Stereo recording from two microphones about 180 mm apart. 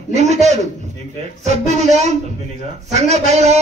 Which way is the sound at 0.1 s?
40° right (ahead or behind).